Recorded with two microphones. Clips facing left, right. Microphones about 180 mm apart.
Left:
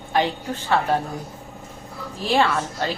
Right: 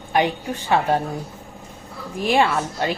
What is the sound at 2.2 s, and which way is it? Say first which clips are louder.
Speech: right 2 dB; 15° right (ahead or behind).